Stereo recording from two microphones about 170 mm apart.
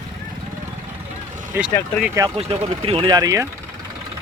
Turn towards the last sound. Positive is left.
turn(degrees=-20)  # may be behind; listen again after turning